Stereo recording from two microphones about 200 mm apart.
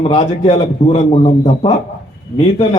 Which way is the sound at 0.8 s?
35° left (ahead or behind).